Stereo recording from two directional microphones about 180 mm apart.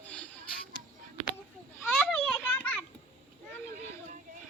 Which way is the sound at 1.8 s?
5° left (ahead or behind).